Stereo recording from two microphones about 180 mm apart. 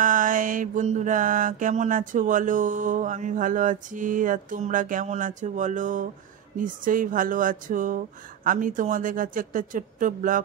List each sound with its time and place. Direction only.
0.0 s mantra: 50° right (ahead or behind)